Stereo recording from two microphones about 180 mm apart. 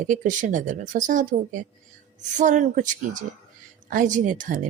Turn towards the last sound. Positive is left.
turn(degrees=-45)  # may be behind; listen again after turning